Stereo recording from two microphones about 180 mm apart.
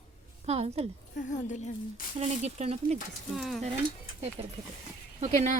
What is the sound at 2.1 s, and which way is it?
Speech, 40° right (ahead or behind).